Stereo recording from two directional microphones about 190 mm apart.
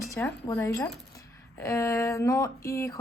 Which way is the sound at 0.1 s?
15° left (ahead or behind).